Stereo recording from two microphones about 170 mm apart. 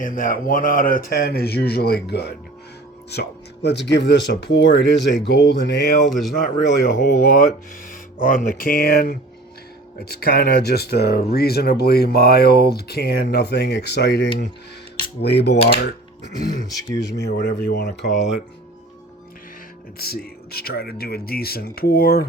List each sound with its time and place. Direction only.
0.0 s speech: 55° left (ahead or behind); by 5.2 s 90° left
5.3 s speech: 70° left (ahead or behind)
6.1 s speech: centre (ahead or behind)
6.3 s speech: 60° left (ahead or behind)
17.2 s speech: 70° left (ahead or behind)
20.0 s speech: 65° left (ahead or behind)